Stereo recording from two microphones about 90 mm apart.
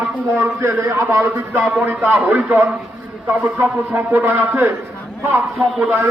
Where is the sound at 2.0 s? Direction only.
15° right (ahead or behind).